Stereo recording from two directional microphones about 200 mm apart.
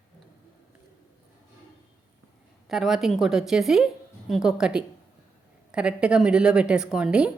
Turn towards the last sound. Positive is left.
turn(degrees=-5)  # may be behind; listen again after turning